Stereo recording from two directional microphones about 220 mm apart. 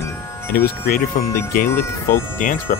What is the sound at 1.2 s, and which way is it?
Speech, 40° left (ahead or behind).